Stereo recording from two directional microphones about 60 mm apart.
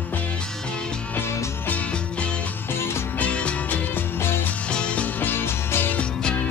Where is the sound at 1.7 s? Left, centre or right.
Left.